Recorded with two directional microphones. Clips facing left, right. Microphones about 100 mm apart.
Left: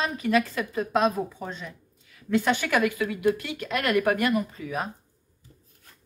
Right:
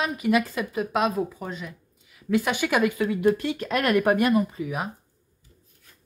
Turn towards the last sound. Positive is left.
turn(degrees=-10)  # may be behind; listen again after turning